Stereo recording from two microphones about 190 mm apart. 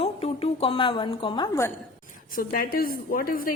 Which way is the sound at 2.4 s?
50° left (ahead or behind).